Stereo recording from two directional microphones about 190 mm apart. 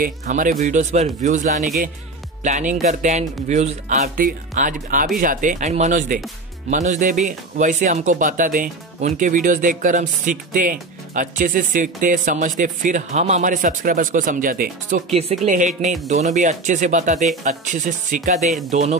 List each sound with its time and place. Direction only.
0.0 s speech: 45° right (ahead or behind)